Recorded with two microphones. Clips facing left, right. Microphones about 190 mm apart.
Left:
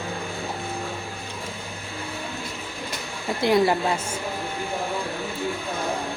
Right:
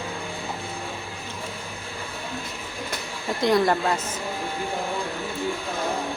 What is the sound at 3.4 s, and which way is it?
Speech, 10° left (ahead or behind).